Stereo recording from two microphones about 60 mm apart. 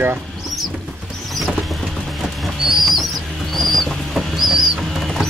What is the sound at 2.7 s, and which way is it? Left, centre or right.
Bird, centre.